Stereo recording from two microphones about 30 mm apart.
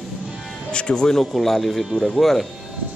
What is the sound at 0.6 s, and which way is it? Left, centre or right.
Speech, left.